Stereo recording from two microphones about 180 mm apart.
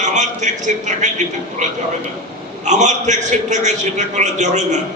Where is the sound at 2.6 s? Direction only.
40° right (ahead or behind).